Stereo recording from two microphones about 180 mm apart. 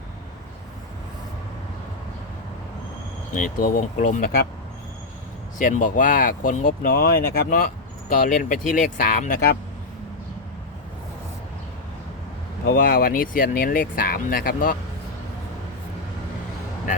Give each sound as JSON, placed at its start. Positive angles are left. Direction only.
{"t": 3.3, "sound": "speech", "side_deg": 50}
{"t": 5.5, "sound": "speech", "side_deg": 45}
{"t": 12.6, "sound": "speech", "side_deg": 55}